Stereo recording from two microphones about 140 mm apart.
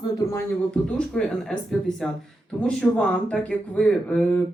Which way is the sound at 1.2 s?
5° left (ahead or behind).